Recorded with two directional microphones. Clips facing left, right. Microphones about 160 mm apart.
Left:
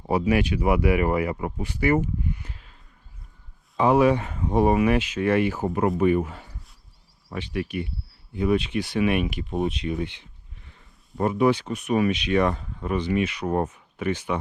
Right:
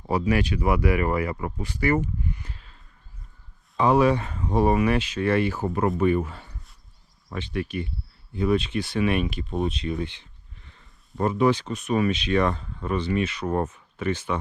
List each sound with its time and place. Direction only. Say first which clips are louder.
0.1 s speech: left 2 dB; 15° left (ahead or behind)
3.8 s speech: left 1 dB; 15° left (ahead or behind)